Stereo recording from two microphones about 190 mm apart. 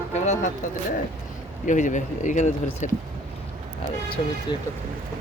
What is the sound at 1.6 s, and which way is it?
Speech, 40° left (ahead or behind).